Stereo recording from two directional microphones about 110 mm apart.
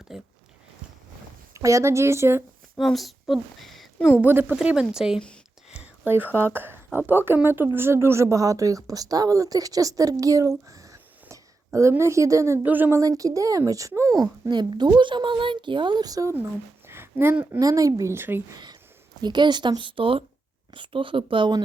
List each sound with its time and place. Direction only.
0.1 s speech: 5° right (ahead or behind)
1.5 s speech: 30° right (ahead or behind)
2.7 s a woman's voice: centre (ahead or behind)
4.2 s speech: 15° right (ahead or behind)
5.8 s speech: 15° right (ahead or behind)
10.7 s whispering: 30° right (ahead or behind)
12.6 s speech: 15° right (ahead or behind)
13.0 s speech: 30° right (ahead or behind)
16.8 s a sound: 20° right (ahead or behind)
17.6 s speech: 30° right (ahead or behind)
18.5 s speech: 40° right (ahead or behind)